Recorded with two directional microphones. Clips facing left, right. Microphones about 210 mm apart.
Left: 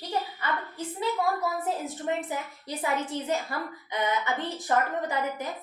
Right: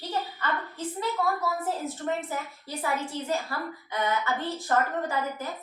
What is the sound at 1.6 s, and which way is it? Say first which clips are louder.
Speech: even; 15° left (ahead or behind).